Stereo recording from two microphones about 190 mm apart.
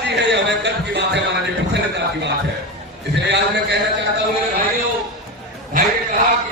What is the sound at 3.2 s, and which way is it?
Speech, 65° right (ahead or behind).